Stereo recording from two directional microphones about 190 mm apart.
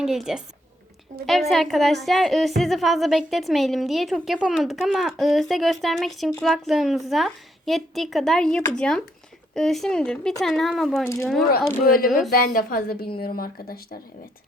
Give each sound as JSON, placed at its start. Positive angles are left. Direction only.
{"t": 0.0, "sound": "a woman's voice", "side_deg": 0}
{"t": 11.0, "sound": "speech", "side_deg": 15}
{"t": 12.0, "sound": "a woman's voice", "side_deg": 0}
{"t": 12.5, "sound": "speech", "side_deg": 50}